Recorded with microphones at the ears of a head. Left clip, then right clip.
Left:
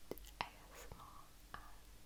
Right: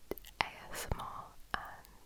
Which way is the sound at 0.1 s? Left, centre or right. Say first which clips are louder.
Right 10 dB; right.